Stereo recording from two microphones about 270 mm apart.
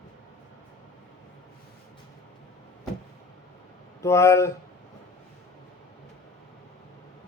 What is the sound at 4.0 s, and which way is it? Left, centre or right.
Speech, centre.